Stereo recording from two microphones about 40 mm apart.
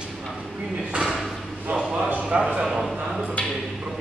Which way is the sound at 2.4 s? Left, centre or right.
Centre.